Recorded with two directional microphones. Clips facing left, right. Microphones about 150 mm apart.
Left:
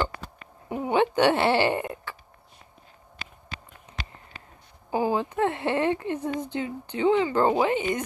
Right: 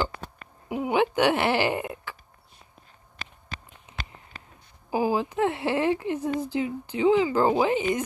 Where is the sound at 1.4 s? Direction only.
30° left (ahead or behind).